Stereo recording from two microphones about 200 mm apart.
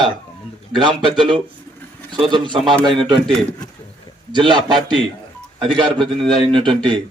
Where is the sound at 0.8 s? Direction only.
25° right (ahead or behind).